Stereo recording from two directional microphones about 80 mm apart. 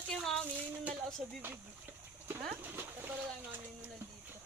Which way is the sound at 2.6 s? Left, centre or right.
Right.